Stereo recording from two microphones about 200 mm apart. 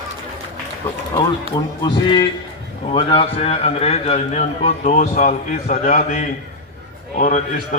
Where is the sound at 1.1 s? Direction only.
20° left (ahead or behind).